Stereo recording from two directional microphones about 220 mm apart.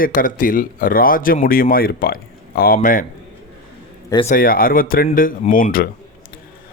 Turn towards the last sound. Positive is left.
turn(degrees=40)  # may be behind; listen again after turning